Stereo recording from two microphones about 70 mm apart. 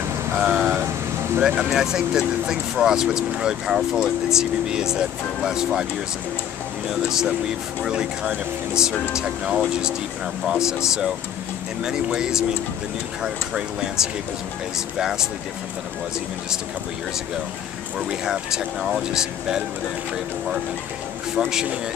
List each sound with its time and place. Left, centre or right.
0.3 s vehicle: centre
1.4 s speech: centre
6.9 s speech: centre
11.8 s speech: centre
17.9 s speech: centre